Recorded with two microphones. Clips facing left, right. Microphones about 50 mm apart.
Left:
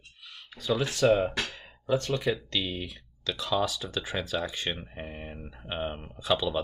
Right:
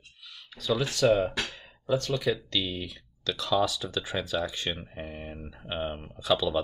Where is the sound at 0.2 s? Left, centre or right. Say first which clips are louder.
Right 1 dB; left.